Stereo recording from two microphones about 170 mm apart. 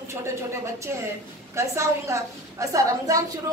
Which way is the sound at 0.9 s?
15° right (ahead or behind).